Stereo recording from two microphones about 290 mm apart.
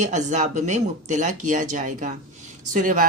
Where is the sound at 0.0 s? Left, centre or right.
Right.